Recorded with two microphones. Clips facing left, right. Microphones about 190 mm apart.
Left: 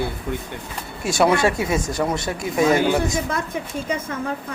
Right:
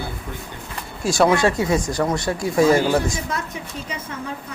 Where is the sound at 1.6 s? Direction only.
25° left (ahead or behind).